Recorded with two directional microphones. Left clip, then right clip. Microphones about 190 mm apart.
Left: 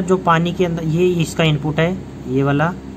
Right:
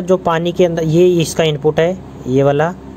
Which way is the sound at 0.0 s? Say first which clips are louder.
Right 1 dB; 20° right (ahead or behind).